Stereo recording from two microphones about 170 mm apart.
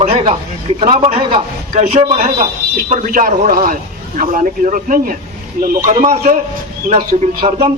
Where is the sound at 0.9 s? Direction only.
40° right (ahead or behind).